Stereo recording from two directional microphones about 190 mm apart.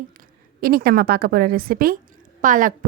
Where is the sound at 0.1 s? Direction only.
50° right (ahead or behind).